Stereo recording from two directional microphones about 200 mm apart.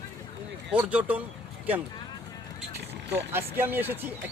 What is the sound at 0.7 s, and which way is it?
Speech, 5° right (ahead or behind).